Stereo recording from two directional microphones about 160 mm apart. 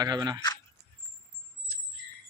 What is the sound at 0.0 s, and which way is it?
Speech, 25° right (ahead or behind).